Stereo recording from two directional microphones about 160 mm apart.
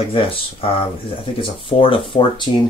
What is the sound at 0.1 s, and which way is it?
Speech, 35° left (ahead or behind).